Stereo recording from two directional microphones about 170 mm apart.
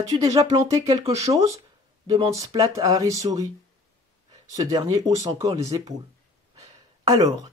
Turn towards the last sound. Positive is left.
turn(degrees=-20)  # may be behind; listen again after turning